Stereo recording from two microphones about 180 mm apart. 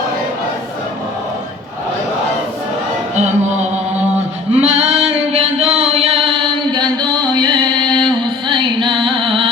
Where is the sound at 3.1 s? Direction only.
40° right (ahead or behind).